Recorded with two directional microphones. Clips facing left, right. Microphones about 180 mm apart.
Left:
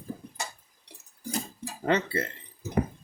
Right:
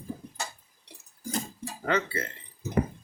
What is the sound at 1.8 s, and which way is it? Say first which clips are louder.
Speech: left 2 dB; 35° left (ahead or behind).